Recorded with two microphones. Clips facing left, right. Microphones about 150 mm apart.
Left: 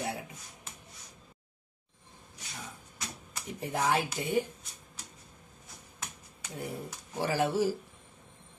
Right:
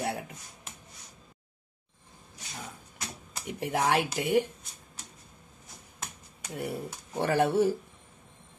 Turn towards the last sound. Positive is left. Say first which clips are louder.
# right 4 dB
turn(degrees=-60)  # may be behind; listen again after turning